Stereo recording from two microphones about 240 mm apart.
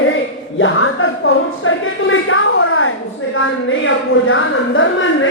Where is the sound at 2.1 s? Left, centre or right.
Left.